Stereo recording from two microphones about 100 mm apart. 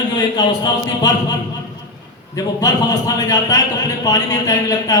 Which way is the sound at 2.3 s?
40° left (ahead or behind).